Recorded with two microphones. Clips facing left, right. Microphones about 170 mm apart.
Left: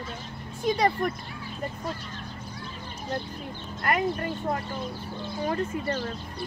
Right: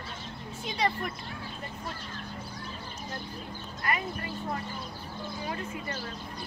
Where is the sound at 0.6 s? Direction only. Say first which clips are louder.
Left 7 dB; 45° left (ahead or behind).